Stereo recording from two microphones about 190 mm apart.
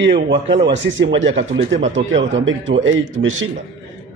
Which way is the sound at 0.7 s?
70° right (ahead or behind).